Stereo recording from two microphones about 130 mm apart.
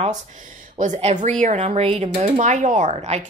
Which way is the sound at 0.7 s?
65° right (ahead or behind).